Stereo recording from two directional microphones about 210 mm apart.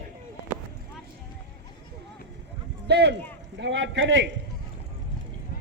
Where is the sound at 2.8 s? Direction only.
55° right (ahead or behind).